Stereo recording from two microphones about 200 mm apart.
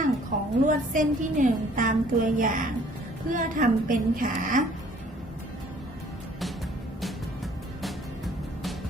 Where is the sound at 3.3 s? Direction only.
45° right (ahead or behind).